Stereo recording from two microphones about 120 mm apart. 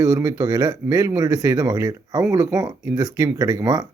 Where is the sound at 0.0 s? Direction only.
30° right (ahead or behind).